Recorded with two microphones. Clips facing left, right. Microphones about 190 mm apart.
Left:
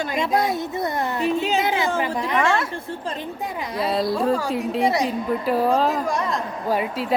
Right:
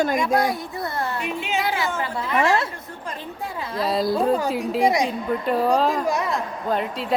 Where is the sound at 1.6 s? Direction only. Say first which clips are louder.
Left 3 dB; 20° left (ahead or behind).